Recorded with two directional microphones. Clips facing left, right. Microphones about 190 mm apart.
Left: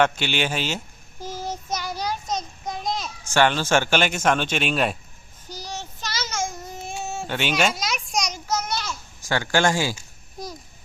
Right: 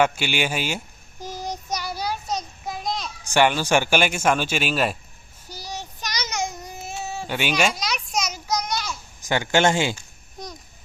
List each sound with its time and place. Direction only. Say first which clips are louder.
0.0 s speech: even; 10° right (ahead or behind)
1.2 s child singing: even; 15° right (ahead or behind); by 3.1 s centre (ahead or behind)
3.2 s speech: right 1 dB; 15° right (ahead or behind)
5.5 s child singing: even; 10° right (ahead or behind)
6.8 s a sound: even; centre (ahead or behind)
9.2 s speech: right 2 dB; 20° right (ahead or behind)